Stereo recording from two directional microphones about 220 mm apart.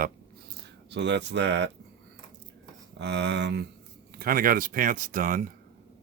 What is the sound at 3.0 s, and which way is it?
Speech, 50° right (ahead or behind).